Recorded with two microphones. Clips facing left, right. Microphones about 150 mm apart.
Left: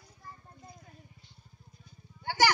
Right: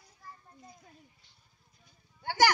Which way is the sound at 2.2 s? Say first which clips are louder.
Right 1 dB; 50° right (ahead or behind).